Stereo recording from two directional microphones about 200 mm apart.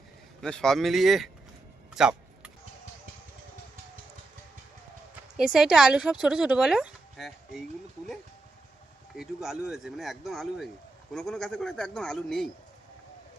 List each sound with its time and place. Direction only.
0.4 s speech: 5° left (ahead or behind)
2.0 s a sound: 5° right (ahead or behind)
5.4 s speech: 5° right (ahead or behind)
9.1 s speech: centre (ahead or behind)